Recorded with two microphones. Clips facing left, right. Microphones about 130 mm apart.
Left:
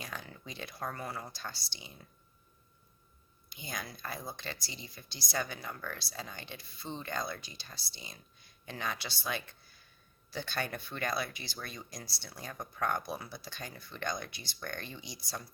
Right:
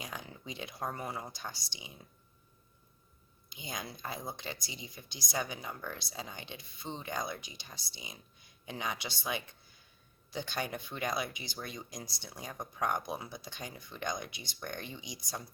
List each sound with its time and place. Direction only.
0.0 s speech: 20° right (ahead or behind)
3.5 s speech: 20° right (ahead or behind)